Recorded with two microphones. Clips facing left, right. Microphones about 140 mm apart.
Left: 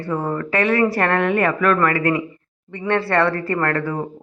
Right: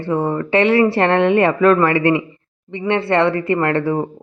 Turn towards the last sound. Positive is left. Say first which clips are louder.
# right 4 dB
turn(degrees=-25)  # may be behind; listen again after turning